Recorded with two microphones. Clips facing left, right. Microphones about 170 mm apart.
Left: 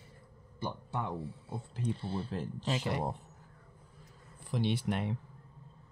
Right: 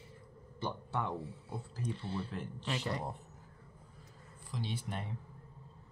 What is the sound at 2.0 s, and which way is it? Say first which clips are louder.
Speech: left 3 dB; 30° left (ahead or behind).